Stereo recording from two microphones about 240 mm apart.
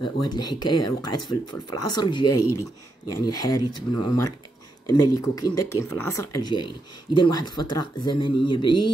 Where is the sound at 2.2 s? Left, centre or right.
Left.